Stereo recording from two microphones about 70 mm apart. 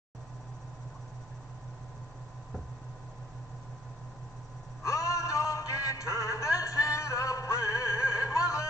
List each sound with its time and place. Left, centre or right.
4.8 s music: left